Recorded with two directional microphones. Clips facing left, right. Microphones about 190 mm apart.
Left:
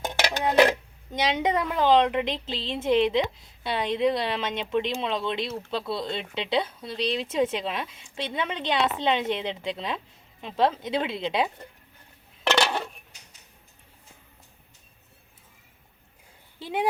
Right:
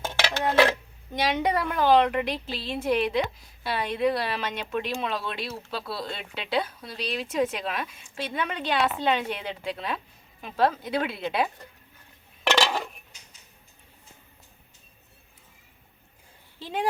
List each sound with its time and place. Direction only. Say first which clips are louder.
0.0 s dishes: left 1 dB; 15° left (ahead or behind)
1.7 s speech: even; 20° left (ahead or behind)
12.6 s dishes: even; centre (ahead or behind)